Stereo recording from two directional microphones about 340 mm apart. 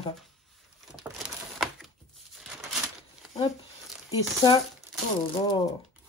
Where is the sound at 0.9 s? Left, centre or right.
Centre.